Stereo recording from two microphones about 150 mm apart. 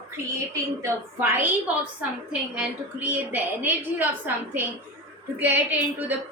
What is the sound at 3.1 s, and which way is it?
A woman's voice, 15° right (ahead or behind).